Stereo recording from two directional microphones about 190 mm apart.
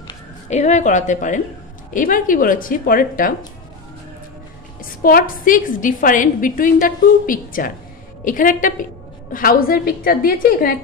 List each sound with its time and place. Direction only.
0.5 s a woman's voice: 40° left (ahead or behind)
5.0 s a woman's voice: 50° left (ahead or behind)